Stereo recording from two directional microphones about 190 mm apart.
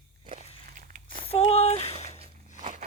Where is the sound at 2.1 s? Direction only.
40° right (ahead or behind).